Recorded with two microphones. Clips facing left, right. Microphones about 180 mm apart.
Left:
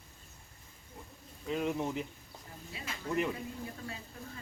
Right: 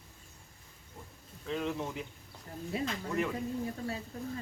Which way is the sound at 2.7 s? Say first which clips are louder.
Right 13 dB; 50° right (ahead or behind).